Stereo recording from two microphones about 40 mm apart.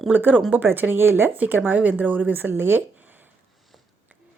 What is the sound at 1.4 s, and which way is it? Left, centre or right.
Speech, right.